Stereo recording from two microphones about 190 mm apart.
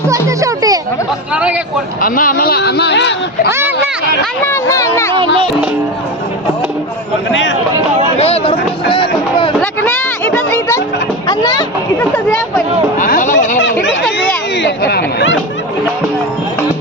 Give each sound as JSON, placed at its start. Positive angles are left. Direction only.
{"t": 0.1, "sound": "a child's voice", "side_deg": -15}
{"t": 1.3, "sound": "speech", "side_deg": -5}
{"t": 2.0, "sound": "speech", "side_deg": 45}
{"t": 4.4, "sound": "speech", "side_deg": 15}
{"t": 5.1, "sound": "speech", "side_deg": -30}
{"t": 8.2, "sound": "speech", "side_deg": 30}
{"t": 9.6, "sound": "a sound", "side_deg": 15}
{"t": 11.3, "sound": "speech", "side_deg": 20}
{"t": 13.0, "sound": "speech", "side_deg": 45}
{"t": 14.2, "sound": "speech", "side_deg": 60}